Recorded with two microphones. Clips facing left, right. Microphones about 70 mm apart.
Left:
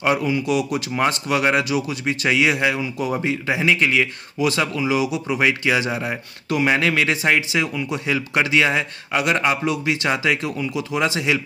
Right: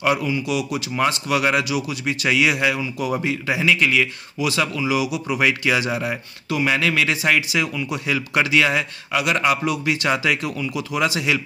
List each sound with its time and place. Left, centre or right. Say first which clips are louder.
0.0 s speech: left 1 dB; left
6.5 s speech: left 1 dB; left
7.2 s speech: even; left